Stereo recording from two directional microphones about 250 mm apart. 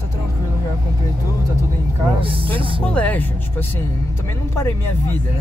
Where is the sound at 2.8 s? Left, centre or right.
Centre.